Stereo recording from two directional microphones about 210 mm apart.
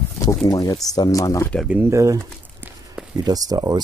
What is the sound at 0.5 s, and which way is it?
Speech, 15° left (ahead or behind).